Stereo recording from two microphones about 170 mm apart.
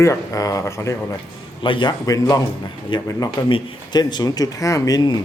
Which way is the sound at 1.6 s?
30° left (ahead or behind).